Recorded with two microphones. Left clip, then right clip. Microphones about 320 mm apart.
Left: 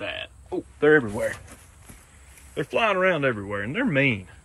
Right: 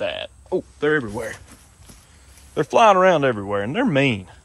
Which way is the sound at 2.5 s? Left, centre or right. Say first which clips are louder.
Right 9 dB; centre.